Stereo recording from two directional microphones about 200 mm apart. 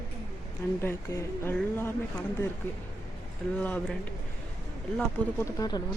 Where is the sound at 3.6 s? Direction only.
5° left (ahead or behind).